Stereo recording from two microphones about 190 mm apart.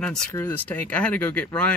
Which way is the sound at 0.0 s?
5° left (ahead or behind).